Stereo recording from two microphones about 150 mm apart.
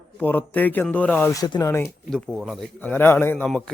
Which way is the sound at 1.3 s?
25° left (ahead or behind).